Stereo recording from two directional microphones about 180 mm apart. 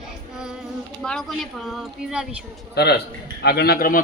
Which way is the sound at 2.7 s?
65° left (ahead or behind).